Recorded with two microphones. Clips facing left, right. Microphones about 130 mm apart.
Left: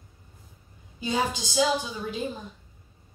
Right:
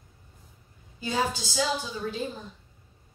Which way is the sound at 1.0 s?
15° left (ahead or behind).